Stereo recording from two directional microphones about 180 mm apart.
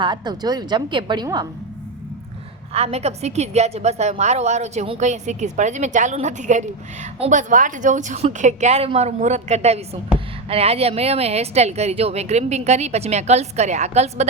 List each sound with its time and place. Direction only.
0.0 s a woman's voice: 25° right (ahead or behind)
2.7 s a woman's voice: 35° right (ahead or behind)